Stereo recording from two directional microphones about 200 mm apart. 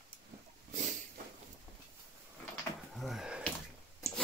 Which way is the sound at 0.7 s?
40° right (ahead or behind).